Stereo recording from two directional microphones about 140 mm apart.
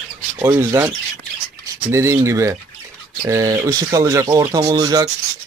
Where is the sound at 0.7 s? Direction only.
25° right (ahead or behind).